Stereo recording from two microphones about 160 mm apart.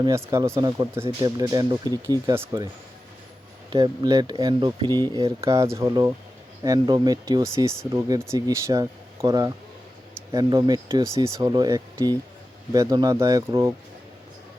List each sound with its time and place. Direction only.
0.0 s speech: 20° right (ahead or behind)
3.7 s speech: 25° right (ahead or behind)